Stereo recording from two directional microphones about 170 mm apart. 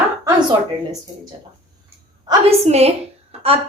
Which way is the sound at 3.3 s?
35° right (ahead or behind).